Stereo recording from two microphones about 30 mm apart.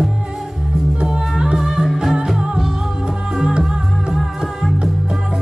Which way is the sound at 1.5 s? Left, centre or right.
Centre.